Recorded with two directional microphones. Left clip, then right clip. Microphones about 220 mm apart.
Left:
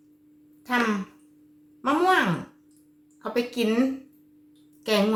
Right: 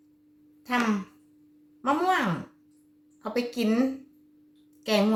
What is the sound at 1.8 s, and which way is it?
A woman's voice, centre (ahead or behind).